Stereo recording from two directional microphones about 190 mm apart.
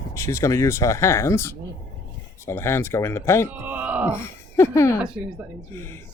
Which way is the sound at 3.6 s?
10° right (ahead or behind).